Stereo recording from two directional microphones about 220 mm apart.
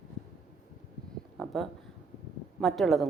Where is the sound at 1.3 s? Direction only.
Centre (ahead or behind).